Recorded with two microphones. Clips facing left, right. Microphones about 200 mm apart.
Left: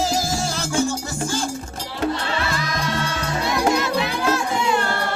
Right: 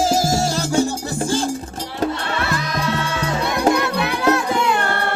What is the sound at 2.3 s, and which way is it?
Music, 60° right (ahead or behind).